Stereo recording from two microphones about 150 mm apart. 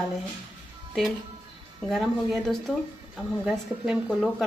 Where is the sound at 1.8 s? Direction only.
Centre (ahead or behind).